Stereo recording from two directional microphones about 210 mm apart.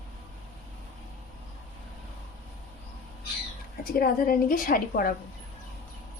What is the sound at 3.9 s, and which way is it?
A woman's voice, 45° left (ahead or behind).